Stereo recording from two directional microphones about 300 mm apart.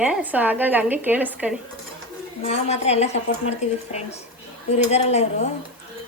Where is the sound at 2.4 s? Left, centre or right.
Left.